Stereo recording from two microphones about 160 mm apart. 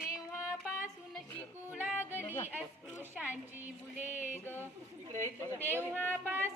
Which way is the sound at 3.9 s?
50° left (ahead or behind).